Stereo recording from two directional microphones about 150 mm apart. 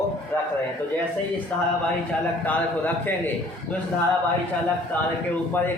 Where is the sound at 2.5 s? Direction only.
10° left (ahead or behind).